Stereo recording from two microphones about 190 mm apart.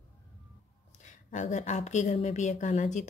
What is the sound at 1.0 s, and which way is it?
A woman's voice, 40° left (ahead or behind).